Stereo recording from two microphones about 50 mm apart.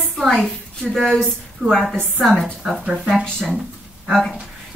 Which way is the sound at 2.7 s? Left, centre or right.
Centre.